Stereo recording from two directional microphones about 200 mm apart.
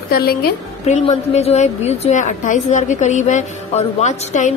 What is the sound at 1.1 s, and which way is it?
A woman's voice, 30° left (ahead or behind).